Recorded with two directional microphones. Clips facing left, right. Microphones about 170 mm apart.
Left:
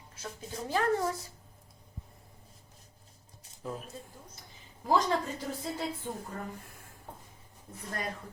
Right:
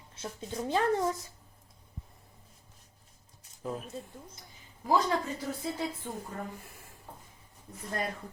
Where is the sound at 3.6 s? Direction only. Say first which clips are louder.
Right 2 dB; centre (ahead or behind).